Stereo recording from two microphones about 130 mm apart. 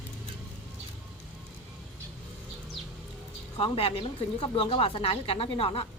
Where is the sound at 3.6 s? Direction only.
45° left (ahead or behind).